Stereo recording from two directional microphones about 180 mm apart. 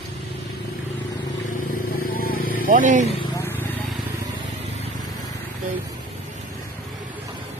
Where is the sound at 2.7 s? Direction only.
45° right (ahead or behind).